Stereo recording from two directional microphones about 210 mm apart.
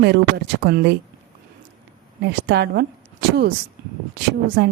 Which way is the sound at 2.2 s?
55° right (ahead or behind).